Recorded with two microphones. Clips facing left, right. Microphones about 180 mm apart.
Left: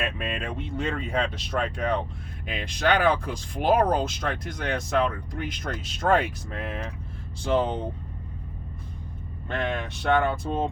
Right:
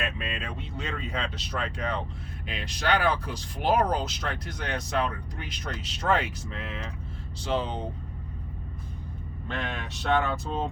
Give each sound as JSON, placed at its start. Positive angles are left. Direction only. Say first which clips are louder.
{"t": 0.2, "sound": "speech", "louder": "left 4 dB", "side_deg": 55}
{"t": 9.5, "sound": "speech", "louder": "left 5 dB", "side_deg": 55}